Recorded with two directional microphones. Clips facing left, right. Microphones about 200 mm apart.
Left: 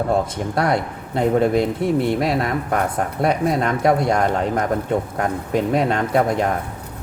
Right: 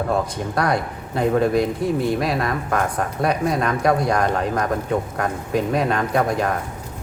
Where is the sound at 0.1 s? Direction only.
25° left (ahead or behind).